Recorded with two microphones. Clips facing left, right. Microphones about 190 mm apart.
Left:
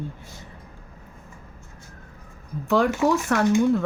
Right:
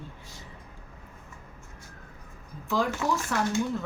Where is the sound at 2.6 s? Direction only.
65° left (ahead or behind).